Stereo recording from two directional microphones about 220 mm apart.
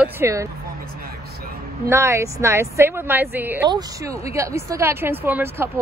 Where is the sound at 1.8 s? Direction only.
10° right (ahead or behind).